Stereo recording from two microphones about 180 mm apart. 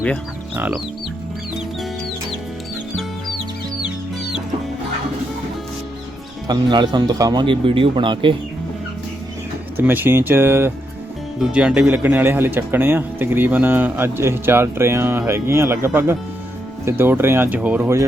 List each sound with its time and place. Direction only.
0.5 s speech: 10° right (ahead or behind)
6.5 s speech: 25° right (ahead or behind)
9.7 s speech: 10° right (ahead or behind)